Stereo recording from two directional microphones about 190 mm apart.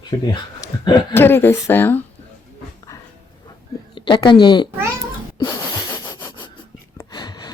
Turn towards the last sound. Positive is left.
turn(degrees=20)  # may be behind; listen again after turning